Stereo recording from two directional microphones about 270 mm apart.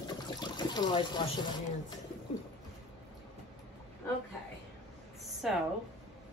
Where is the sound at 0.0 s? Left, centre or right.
Centre.